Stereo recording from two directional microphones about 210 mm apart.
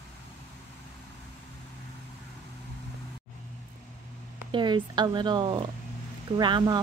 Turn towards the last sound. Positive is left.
turn(degrees=-20)  # may be behind; listen again after turning